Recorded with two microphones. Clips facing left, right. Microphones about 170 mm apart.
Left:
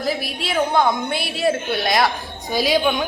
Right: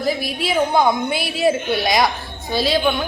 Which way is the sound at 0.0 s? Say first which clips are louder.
Right 3 dB; centre (ahead or behind).